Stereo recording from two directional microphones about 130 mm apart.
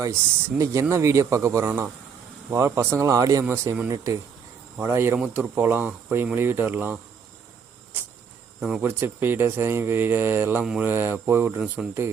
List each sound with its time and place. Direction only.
0.6 s a man's voice: 25° right (ahead or behind)
8.8 s speech: 15° right (ahead or behind)